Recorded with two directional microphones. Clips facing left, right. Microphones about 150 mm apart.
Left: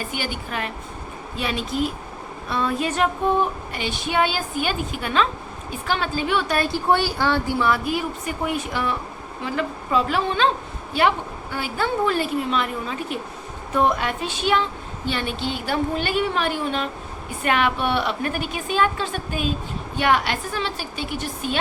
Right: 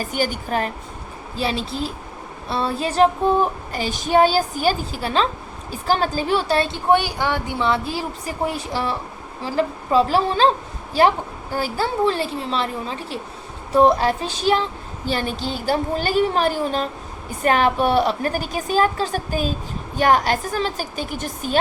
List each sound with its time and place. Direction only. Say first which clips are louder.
0.0 s a woman's voice: right 5 dB; 40° right (ahead or behind)